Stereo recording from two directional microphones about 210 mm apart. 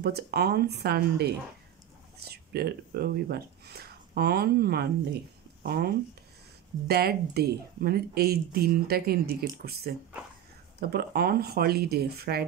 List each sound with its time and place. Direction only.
0.0 s speech: 50° right (ahead or behind)
2.3 s speech: 50° right (ahead or behind)